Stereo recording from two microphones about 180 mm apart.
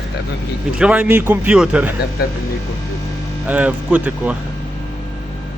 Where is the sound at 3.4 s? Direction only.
10° right (ahead or behind).